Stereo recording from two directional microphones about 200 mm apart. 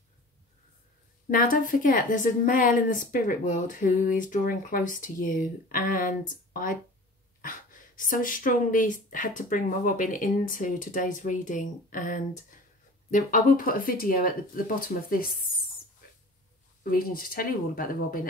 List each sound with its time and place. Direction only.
1.3 s a woman's voice: 45° left (ahead or behind)
16.9 s a woman's voice: 45° left (ahead or behind)